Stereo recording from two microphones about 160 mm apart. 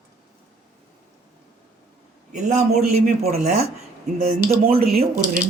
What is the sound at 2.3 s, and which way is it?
Speech, 45° right (ahead or behind).